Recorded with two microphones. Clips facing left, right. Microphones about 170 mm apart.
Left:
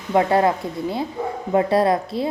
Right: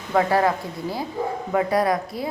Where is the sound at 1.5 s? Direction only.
25° left (ahead or behind).